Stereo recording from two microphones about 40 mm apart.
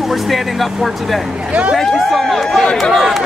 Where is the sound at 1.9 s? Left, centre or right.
Centre.